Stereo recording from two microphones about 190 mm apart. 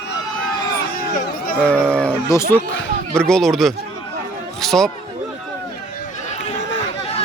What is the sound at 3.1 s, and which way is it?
Speech, 5° left (ahead or behind).